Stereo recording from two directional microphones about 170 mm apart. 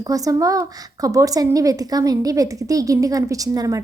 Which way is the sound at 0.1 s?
20° right (ahead or behind).